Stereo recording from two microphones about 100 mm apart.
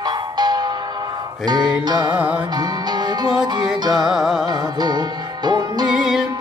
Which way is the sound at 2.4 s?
45° right (ahead or behind).